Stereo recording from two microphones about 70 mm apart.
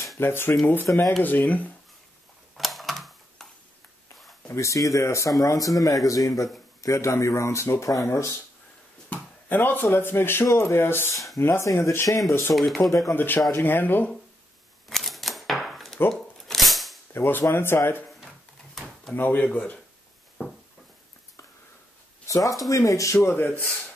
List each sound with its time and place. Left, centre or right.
0.2 s speech: left
2.5 s typing: centre
4.5 s speech: left
9.1 s speech: left
12.5 s speech: centre
13.1 s speech: left
14.9 s typewriter: centre
16.1 s shuffling cards: centre
17.1 s speech: left
19.1 s speech: left
22.2 s speech: left